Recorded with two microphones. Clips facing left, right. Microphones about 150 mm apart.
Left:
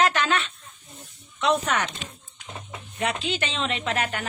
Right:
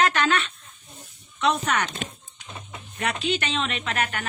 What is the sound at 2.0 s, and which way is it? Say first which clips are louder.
Speech: right 6 dB; 55° right (ahead or behind).